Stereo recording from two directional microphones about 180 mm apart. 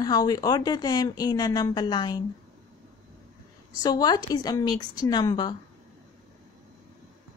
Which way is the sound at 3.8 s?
20° left (ahead or behind).